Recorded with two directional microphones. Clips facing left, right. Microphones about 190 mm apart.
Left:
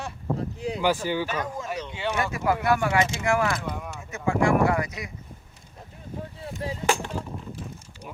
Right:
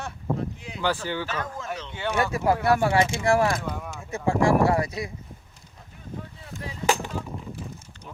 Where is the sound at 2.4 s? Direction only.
30° right (ahead or behind).